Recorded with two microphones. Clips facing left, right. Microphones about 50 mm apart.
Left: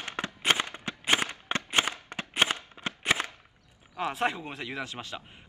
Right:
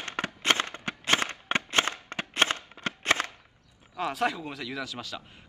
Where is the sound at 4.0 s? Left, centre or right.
Left.